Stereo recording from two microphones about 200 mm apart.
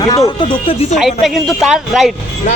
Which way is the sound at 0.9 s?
Centre (ahead or behind).